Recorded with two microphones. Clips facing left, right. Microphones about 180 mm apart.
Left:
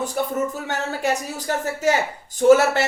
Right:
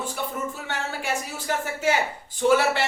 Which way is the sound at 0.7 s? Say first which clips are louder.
Left 4 dB; 40° left (ahead or behind).